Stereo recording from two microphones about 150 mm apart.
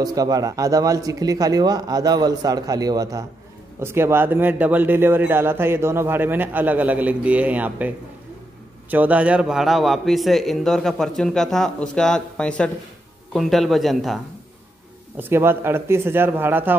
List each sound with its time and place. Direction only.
0.0 s speech: 25° right (ahead or behind)
8.9 s a man's voice: 10° right (ahead or behind)
15.1 s speech: 15° right (ahead or behind)